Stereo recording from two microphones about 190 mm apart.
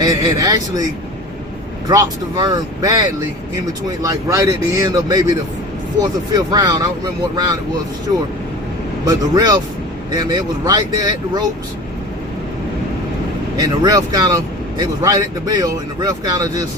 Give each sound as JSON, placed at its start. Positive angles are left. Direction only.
{"t": 0.0, "sound": "speech", "side_deg": -20}
{"t": 1.9, "sound": "speech", "side_deg": -20}
{"t": 9.0, "sound": "speech", "side_deg": -20}
{"t": 13.6, "sound": "speech", "side_deg": -20}